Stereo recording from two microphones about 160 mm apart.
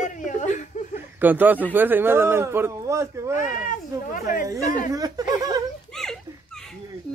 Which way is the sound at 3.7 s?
60° left (ahead or behind).